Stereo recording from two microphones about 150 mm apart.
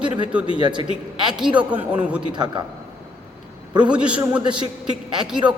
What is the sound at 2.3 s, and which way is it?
Speech, 30° right (ahead or behind).